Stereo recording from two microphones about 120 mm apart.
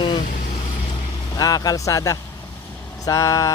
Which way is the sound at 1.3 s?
30° left (ahead or behind).